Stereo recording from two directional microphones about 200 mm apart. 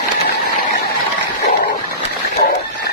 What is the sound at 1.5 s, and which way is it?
Dog, 55° left (ahead or behind).